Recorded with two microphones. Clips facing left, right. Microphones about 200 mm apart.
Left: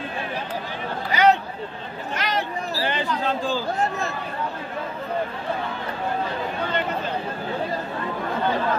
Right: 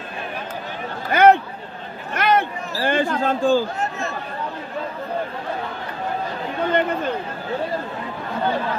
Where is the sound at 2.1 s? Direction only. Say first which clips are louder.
Right 7 dB; 55° right (ahead or behind).